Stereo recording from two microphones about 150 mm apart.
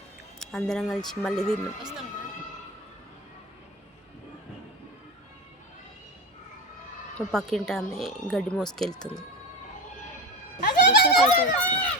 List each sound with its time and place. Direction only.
0.3 s speech: 5° left (ahead or behind)
7.2 s speech: 5° left (ahead or behind)
10.6 s a sound: 85° left
11.6 s run: 10° left (ahead or behind)